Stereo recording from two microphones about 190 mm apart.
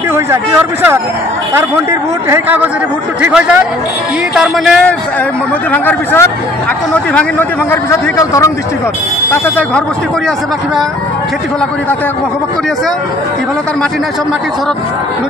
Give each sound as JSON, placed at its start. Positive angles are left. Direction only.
{"t": 1.9, "sound": "a man's voice", "side_deg": -15}